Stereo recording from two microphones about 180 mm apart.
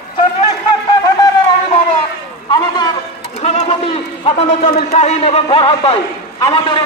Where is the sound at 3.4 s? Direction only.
35° left (ahead or behind).